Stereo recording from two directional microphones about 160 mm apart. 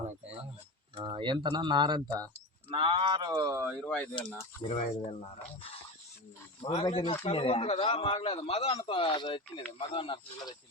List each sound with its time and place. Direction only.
0.9 s speech: 30° right (ahead or behind); by 3.8 s 15° right (ahead or behind)
3.8 s speech: 10° left (ahead or behind)
4.7 s speech: 45° left (ahead or behind)
6.6 s a man's voice: 40° left (ahead or behind)